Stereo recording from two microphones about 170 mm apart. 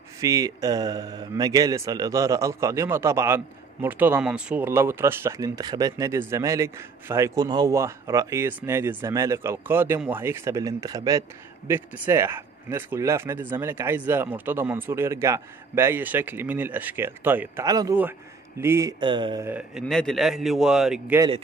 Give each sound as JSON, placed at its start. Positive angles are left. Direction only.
{"t": 0.2, "sound": "a man's voice", "side_deg": -20}
{"t": 19.4, "sound": "a man's voice", "side_deg": -10}
{"t": 19.9, "sound": "speech", "side_deg": 0}